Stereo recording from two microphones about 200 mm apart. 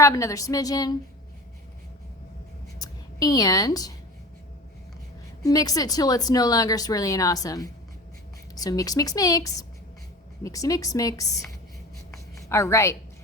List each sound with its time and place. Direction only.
0.0 s speech: 15° left (ahead or behind)
2.7 s speech: 20° left (ahead or behind)
5.4 s speech: 15° left (ahead or behind)
12.5 s speech: 15° left (ahead or behind)